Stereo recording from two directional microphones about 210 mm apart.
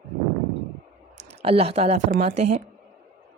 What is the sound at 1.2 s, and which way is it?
Speech, 30° right (ahead or behind).